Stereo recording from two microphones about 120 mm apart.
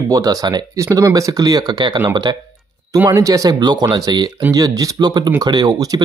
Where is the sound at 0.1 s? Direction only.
30° right (ahead or behind).